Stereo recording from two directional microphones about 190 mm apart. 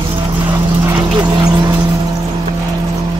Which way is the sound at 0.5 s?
15° right (ahead or behind).